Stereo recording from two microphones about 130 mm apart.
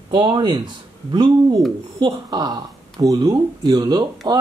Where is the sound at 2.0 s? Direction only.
35° right (ahead or behind).